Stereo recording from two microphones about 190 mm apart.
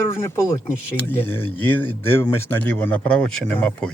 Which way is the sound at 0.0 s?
15° left (ahead or behind).